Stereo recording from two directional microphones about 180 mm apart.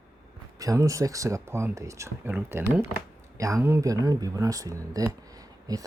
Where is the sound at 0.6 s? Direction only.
20° right (ahead or behind).